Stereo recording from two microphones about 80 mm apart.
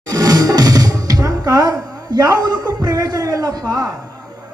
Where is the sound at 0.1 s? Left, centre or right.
Right.